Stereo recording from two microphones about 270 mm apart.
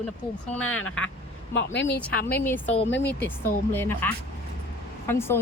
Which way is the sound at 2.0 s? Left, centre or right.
Centre.